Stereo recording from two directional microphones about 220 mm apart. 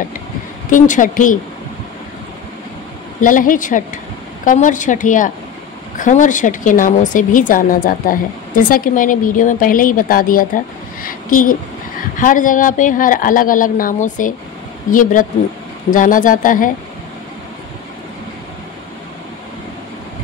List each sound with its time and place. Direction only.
0.7 s a woman's voice: 35° left (ahead or behind)
3.2 s a woman's voice: 40° left (ahead or behind)